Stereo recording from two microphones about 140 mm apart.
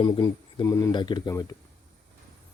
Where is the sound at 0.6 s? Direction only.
25° left (ahead or behind).